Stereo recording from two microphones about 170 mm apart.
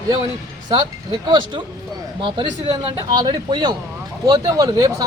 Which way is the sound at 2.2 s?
30° right (ahead or behind).